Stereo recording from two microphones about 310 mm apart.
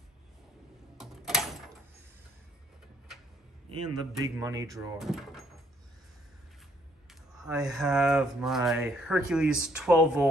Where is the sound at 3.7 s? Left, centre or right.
Right.